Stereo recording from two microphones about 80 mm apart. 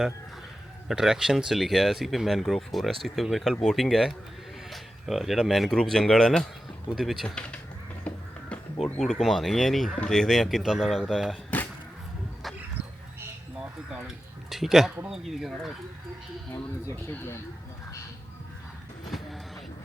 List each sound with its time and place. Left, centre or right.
0.9 s speech: centre
7.3 s speech: centre
8.1 s music: centre
8.8 s speech: centre
12.8 s dog: right
14.5 s speech: centre
16.9 s speech: left
19.1 s vehicle: centre